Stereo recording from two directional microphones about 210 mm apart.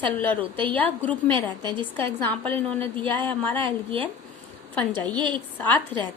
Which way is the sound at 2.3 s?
5° left (ahead or behind).